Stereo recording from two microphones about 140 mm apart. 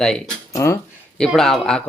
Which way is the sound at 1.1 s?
5° left (ahead or behind).